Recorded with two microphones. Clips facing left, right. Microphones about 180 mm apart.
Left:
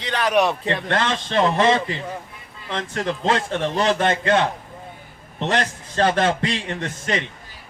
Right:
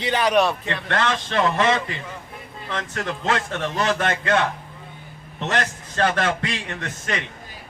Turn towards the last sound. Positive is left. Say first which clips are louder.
# left 4 dB
turn(degrees=30)  # may be behind; listen again after turning